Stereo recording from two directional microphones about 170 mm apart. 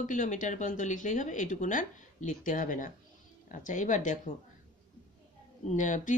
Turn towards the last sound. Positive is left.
turn(degrees=50)  # may be behind; listen again after turning